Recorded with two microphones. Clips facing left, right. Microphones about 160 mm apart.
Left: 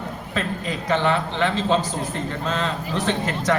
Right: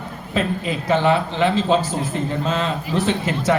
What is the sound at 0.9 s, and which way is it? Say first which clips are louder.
Speech: right 4 dB; 10° right (ahead or behind).